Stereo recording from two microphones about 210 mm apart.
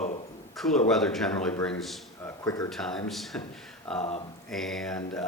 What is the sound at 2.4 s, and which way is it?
Speech, 15° left (ahead or behind).